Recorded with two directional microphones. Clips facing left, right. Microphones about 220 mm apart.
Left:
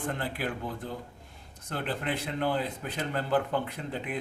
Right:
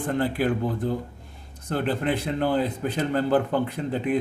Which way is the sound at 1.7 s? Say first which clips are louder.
Right 8 dB; 40° right (ahead or behind).